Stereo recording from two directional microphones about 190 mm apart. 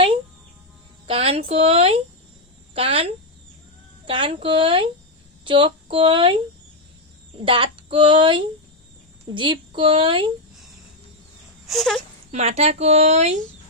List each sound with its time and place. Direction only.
1.0 s a woman's voice: 30° right (ahead or behind)
7.4 s a woman's voice: 25° right (ahead or behind)
11.6 s speech: centre (ahead or behind)
12.3 s speech: 35° right (ahead or behind)